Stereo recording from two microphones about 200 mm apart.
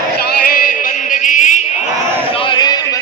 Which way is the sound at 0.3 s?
45° left (ahead or behind).